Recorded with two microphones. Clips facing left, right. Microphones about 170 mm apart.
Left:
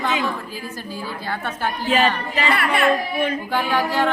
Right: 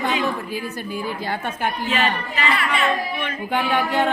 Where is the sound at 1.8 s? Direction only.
40° left (ahead or behind).